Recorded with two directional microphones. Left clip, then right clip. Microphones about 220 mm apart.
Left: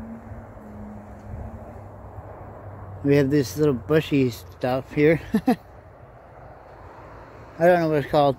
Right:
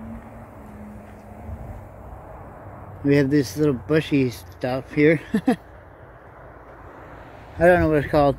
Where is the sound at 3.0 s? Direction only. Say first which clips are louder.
Right 1 dB; 10° left (ahead or behind).